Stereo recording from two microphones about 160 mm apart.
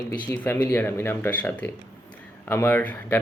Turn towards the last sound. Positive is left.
turn(degrees=10)  # may be behind; listen again after turning